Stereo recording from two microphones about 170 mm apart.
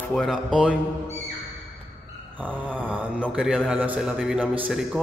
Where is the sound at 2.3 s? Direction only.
10° right (ahead or behind).